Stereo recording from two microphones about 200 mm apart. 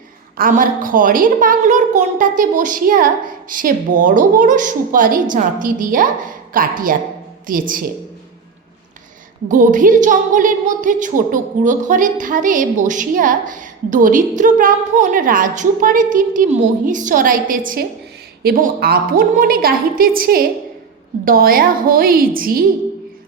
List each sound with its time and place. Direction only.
0.3 s a woman's voice: 45° right (ahead or behind)
9.5 s a woman's voice: 40° right (ahead or behind)